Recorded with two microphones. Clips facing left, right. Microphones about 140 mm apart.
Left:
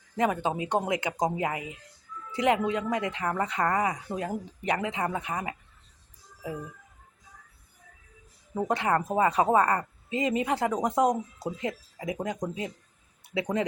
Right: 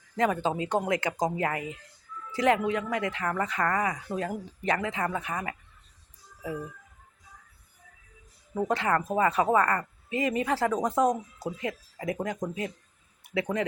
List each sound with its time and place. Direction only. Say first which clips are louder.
0.2 s speech: even; 15° left (ahead or behind)
8.5 s speech: even; 20° left (ahead or behind)